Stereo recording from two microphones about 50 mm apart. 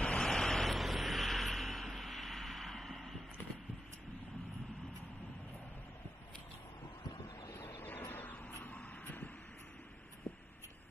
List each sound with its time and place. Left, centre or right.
0.0 s waves: left
0.3 s vehicle: centre
7.7 s a sound: left
8.6 s vehicle: left